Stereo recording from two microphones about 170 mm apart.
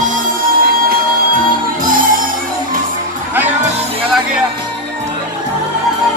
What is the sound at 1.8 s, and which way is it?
Music, 55° right (ahead or behind).